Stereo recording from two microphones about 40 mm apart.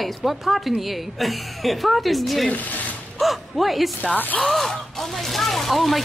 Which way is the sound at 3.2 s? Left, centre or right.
Centre.